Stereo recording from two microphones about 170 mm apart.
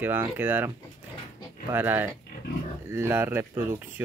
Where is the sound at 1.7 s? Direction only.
15° right (ahead or behind).